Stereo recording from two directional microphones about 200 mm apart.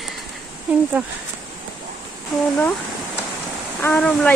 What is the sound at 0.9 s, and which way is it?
Speech, 5° right (ahead or behind).